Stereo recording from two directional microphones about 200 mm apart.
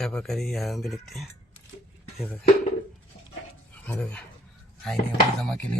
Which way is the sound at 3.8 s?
5° left (ahead or behind).